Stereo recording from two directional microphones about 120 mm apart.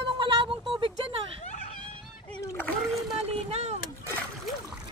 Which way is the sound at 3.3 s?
60° right (ahead or behind).